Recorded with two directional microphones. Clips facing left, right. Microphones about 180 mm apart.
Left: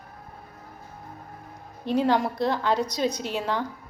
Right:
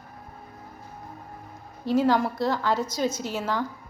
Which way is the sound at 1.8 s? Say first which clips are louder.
Right 1 dB; 20° left (ahead or behind).